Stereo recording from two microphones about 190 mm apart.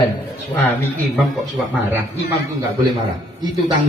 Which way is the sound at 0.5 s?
10° left (ahead or behind).